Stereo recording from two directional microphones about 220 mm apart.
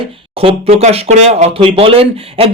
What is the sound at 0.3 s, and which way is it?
Speech, 25° right (ahead or behind).